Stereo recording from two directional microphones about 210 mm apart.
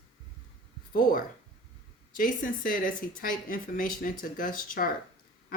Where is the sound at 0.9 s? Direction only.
40° left (ahead or behind).